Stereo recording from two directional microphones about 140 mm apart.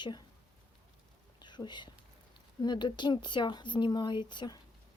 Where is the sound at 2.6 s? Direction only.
30° left (ahead or behind).